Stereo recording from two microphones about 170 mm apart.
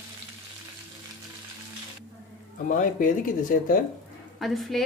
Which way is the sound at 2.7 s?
50° left (ahead or behind).